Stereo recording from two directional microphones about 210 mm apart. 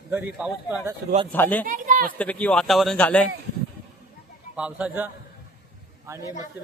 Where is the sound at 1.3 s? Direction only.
10° left (ahead or behind).